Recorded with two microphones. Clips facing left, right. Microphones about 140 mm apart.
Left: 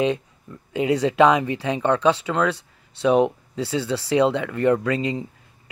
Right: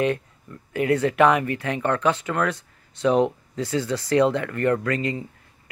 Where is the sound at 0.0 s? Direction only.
15° left (ahead or behind).